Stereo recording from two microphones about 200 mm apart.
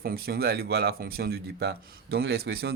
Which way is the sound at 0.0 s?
50° right (ahead or behind).